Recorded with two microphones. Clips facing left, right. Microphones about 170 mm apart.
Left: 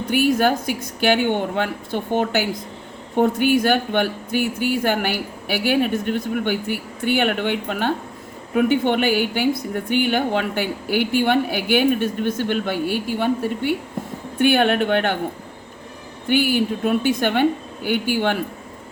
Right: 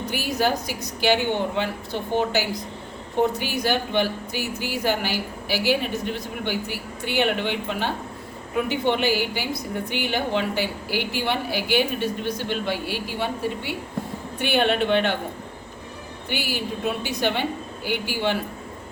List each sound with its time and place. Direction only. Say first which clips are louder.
0.1 s a woman's voice: left 7 dB; 55° left (ahead or behind)
16.3 s a woman's voice: left 10 dB; 50° left (ahead or behind)